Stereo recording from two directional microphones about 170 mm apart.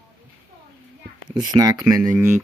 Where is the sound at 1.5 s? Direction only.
20° right (ahead or behind).